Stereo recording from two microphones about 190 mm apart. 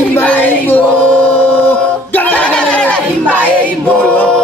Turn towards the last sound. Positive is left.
turn(degrees=5)  # may be behind; listen again after turning